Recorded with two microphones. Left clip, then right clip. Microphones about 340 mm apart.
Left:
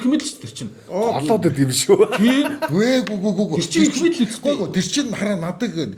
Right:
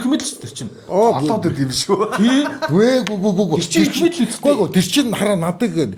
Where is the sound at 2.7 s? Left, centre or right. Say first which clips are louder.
Right 5 dB; right.